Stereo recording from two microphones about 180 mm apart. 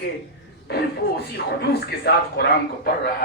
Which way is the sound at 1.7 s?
60° left (ahead or behind).